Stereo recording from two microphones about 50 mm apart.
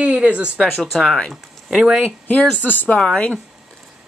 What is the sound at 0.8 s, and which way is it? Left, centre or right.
Speech, centre.